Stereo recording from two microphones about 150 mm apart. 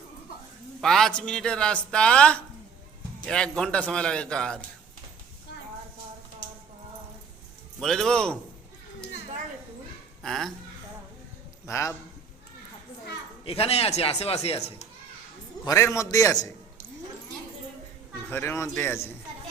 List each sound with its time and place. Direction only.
0.8 s a man's voice: centre (ahead or behind)
7.8 s speech: 5° left (ahead or behind)
10.2 s speech: centre (ahead or behind)
11.6 s a man's voice: 20° left (ahead or behind)
13.4 s speech: 40° left (ahead or behind)
15.6 s a man's voice: 20° left (ahead or behind)
18.3 s a man's voice: 15° left (ahead or behind)